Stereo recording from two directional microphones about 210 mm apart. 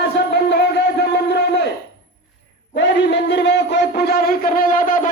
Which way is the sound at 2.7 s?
55° left (ahead or behind).